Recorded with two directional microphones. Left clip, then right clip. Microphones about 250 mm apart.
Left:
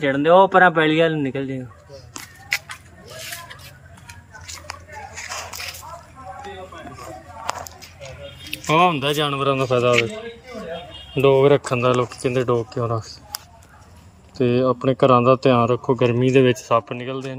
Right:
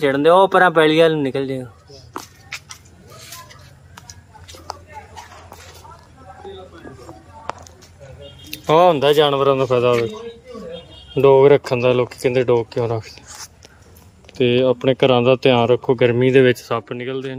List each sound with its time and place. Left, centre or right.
0.0 s speech: centre
8.4 s speech: centre
11.1 s speech: centre
14.3 s speech: centre